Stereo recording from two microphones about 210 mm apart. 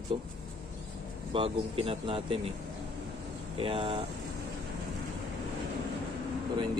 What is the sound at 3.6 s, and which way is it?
Speech, 25° right (ahead or behind).